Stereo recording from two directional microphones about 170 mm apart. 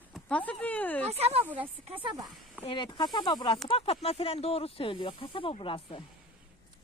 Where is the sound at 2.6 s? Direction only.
30° left (ahead or behind).